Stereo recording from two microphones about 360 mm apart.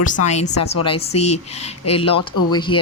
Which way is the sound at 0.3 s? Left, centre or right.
Centre.